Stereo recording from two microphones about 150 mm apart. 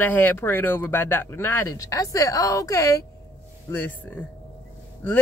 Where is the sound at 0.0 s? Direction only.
15° left (ahead or behind).